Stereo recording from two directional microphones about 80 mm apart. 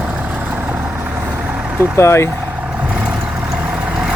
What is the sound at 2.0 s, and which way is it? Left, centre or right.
Speech, left.